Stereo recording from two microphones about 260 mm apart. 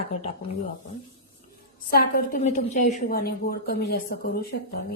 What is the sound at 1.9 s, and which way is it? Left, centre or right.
A woman's voice, left.